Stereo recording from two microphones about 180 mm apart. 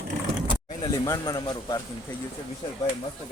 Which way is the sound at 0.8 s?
20° left (ahead or behind).